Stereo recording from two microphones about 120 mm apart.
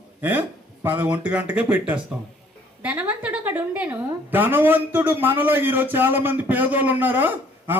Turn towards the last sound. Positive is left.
turn(degrees=-15)  # may be behind; listen again after turning